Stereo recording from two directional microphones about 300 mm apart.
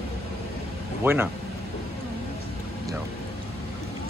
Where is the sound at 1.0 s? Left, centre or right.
Centre.